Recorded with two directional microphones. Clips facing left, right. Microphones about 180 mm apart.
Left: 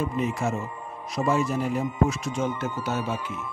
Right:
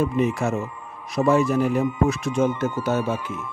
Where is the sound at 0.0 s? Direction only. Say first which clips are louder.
Right 5 dB; 65° right (ahead or behind); by 3.2 s 50° right (ahead or behind).